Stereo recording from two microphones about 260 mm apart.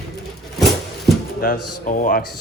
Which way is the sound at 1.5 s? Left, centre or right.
Left.